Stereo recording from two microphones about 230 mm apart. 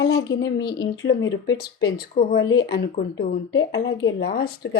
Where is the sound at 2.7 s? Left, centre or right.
Left.